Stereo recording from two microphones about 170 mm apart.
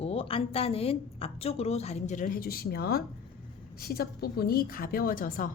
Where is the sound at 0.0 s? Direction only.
35° left (ahead or behind).